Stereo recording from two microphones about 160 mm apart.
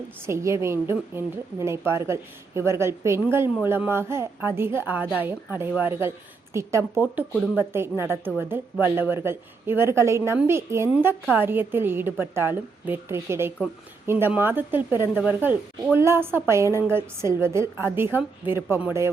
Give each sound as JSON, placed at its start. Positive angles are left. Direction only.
{"t": 0.3, "sound": "speech", "side_deg": -15}